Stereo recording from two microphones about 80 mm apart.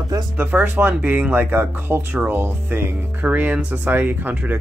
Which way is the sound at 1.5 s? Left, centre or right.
Right.